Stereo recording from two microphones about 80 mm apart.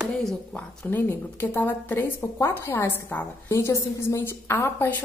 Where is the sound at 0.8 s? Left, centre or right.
Left.